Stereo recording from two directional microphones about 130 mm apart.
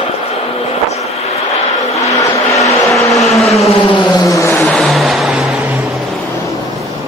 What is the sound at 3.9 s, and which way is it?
Vehicle, 35° left (ahead or behind).